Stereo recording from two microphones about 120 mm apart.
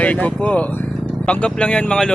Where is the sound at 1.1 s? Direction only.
10° left (ahead or behind).